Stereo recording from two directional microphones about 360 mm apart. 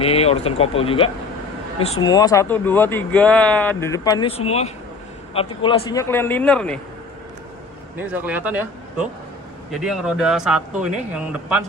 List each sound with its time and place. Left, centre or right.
0.0 s speech: centre
7.9 s speech: centre